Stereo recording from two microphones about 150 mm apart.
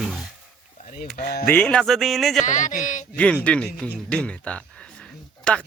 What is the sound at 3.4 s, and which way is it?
Speech, 5° left (ahead or behind).